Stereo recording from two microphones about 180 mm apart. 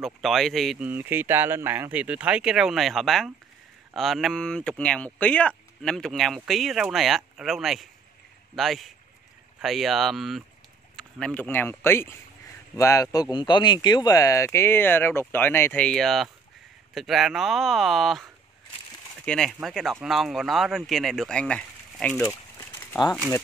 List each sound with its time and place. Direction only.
0.0 s speech: centre (ahead or behind)
19.2 s speech: 5° left (ahead or behind); by 23.1 s 20° left (ahead or behind)